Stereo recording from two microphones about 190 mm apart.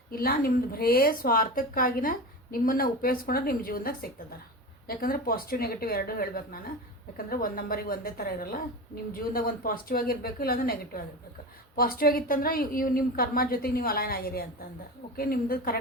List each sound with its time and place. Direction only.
0.1 s speech: 50° left (ahead or behind)